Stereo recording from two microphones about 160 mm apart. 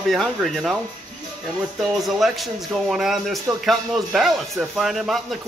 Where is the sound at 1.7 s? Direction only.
Centre (ahead or behind).